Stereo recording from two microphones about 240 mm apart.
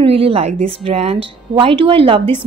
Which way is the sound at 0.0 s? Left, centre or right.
Right.